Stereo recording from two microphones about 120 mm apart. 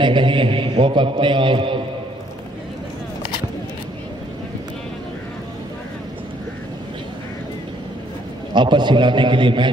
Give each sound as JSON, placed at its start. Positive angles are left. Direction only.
{"t": 0.0, "sound": "a man's voice", "side_deg": -45}
{"t": 8.5, "sound": "a man's voice", "side_deg": -40}